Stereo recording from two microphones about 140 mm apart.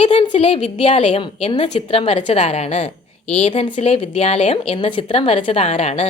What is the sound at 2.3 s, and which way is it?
A woman's voice, 50° left (ahead or behind).